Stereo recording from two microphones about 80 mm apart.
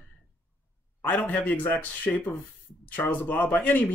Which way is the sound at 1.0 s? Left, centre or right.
Left.